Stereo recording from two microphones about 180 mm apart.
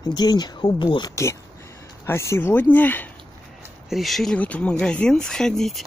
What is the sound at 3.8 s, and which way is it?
Speech, centre (ahead or behind).